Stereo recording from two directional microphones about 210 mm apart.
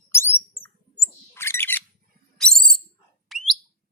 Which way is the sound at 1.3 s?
10° left (ahead or behind).